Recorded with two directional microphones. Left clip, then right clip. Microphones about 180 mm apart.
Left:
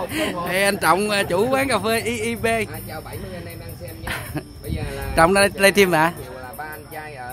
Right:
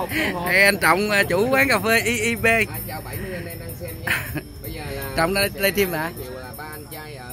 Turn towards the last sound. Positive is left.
turn(degrees=-55)  # may be behind; listen again after turning